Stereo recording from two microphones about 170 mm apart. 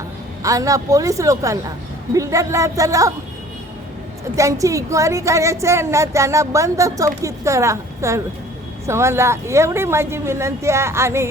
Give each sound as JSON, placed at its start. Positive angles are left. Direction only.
{"t": 0.4, "sound": "speech", "side_deg": -20}
{"t": 4.4, "sound": "a woman's voice", "side_deg": -20}